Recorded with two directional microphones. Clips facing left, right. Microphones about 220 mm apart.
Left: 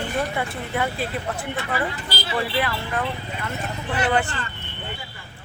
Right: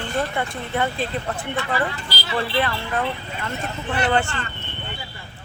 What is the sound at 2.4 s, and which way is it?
Speech, 10° left (ahead or behind).